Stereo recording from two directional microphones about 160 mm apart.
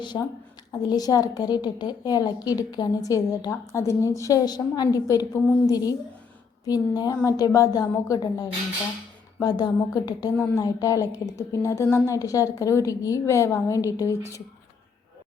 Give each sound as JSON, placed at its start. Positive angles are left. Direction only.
{"t": 0.0, "sound": "a woman's voice", "side_deg": 30}